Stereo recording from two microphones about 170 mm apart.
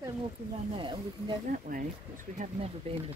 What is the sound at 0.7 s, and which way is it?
Speech, 30° right (ahead or behind).